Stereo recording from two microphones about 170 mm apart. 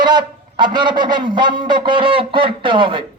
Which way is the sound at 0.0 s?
25° right (ahead or behind).